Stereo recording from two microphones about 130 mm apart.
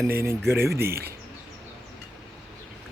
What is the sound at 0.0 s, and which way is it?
Speech, 20° right (ahead or behind).